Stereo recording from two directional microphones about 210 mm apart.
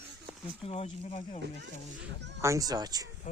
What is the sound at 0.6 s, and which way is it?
Speech, 30° left (ahead or behind).